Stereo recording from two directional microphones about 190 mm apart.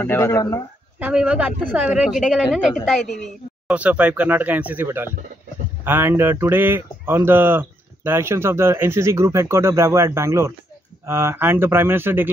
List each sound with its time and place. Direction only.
0.0 s speech: 15° left (ahead or behind)
0.9 s speech: 5° right (ahead or behind)